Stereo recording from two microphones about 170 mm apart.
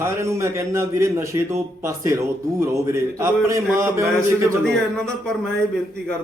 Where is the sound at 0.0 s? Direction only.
15° right (ahead or behind).